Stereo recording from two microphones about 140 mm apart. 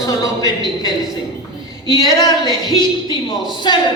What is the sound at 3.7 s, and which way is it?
Speech, 30° left (ahead or behind).